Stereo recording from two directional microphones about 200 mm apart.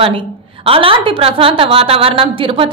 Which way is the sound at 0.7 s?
25° right (ahead or behind).